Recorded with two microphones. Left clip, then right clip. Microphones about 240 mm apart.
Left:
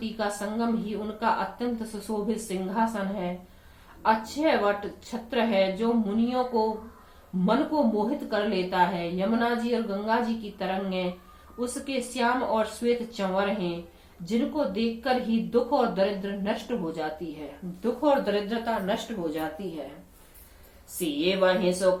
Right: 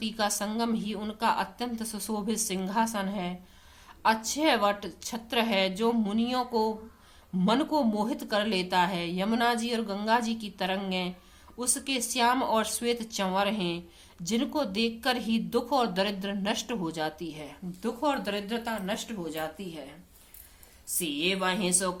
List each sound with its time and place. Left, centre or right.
0.0 s speech: right
21.0 s speech: right